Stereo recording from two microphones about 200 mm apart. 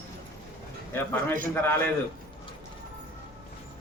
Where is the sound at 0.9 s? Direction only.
10° left (ahead or behind).